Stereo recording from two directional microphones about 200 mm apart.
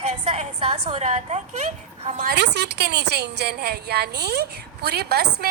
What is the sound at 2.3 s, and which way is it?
A woman's voice, 60° right (ahead or behind).